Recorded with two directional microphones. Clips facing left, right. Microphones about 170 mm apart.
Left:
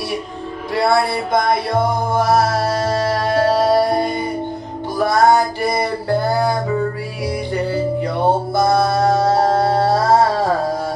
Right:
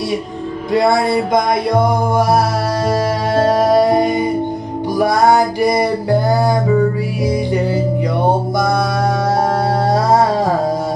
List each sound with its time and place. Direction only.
0.7 s music: 20° right (ahead or behind)
7.5 s music: 20° right (ahead or behind)